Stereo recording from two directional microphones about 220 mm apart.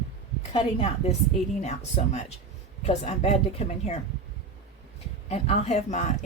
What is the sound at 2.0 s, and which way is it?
A woman's voice, 35° left (ahead or behind).